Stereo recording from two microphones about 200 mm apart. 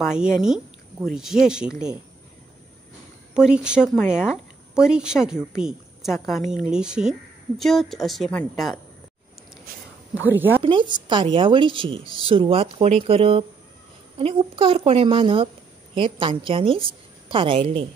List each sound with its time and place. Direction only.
0.0 s speech: 5° right (ahead or behind)
3.3 s a woman's voice: 5° right (ahead or behind)
10.1 s speech: 10° right (ahead or behind)
10.6 s a woman's voice: 25° right (ahead or behind)